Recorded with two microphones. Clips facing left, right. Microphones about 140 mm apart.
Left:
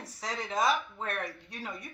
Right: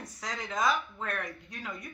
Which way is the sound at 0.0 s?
30° left (ahead or behind).